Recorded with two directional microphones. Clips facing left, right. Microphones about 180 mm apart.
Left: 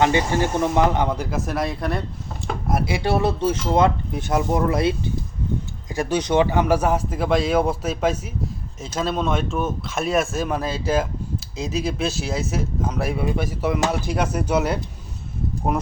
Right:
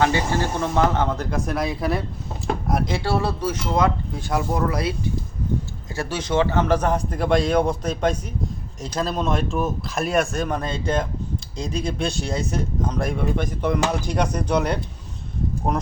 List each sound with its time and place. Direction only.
0.0 s a man's voice: 20° left (ahead or behind)